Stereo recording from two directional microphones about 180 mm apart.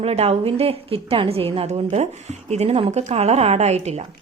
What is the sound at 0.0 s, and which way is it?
Speech, 35° right (ahead or behind).